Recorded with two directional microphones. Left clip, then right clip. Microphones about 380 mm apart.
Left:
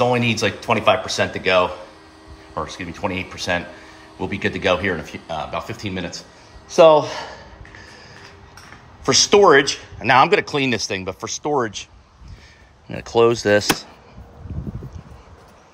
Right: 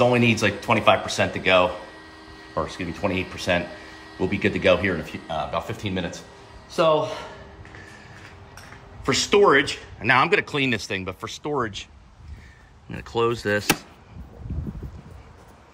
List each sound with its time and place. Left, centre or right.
0.0 s speech: centre
9.0 s speech: centre